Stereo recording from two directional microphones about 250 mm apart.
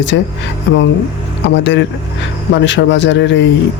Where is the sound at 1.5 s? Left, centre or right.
Left.